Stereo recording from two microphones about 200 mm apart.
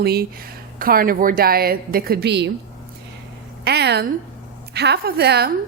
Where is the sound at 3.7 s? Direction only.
55° right (ahead or behind).